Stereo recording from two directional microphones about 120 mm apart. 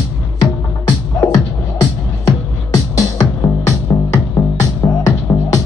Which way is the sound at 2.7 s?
30° left (ahead or behind).